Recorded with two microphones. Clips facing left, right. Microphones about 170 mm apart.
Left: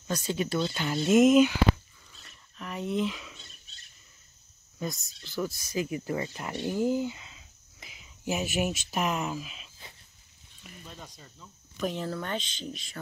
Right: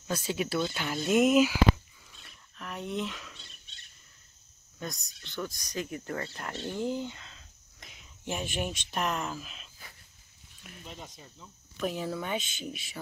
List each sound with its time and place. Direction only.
0.0 s speech: 5° right (ahead or behind)
2.1 s a sound: centre (ahead or behind)
4.7 s speech: centre (ahead or behind)
10.6 s a sound: centre (ahead or behind)
10.9 s speech: 20° right (ahead or behind)
11.7 s speech: centre (ahead or behind)